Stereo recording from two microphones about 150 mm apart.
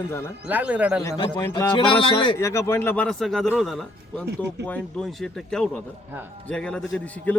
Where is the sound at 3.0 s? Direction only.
Centre (ahead or behind).